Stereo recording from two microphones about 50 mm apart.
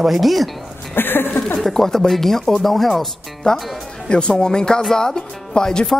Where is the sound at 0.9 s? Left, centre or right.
Left.